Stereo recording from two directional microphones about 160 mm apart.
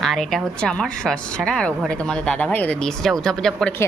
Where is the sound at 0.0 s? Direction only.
Centre (ahead or behind).